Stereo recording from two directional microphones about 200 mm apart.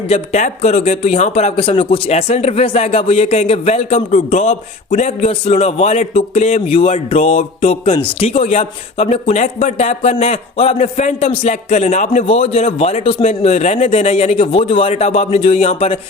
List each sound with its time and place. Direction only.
0.1 s a man's voice: 35° left (ahead or behind)